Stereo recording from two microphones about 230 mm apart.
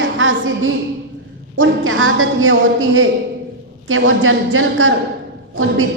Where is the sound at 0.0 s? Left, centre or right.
Right.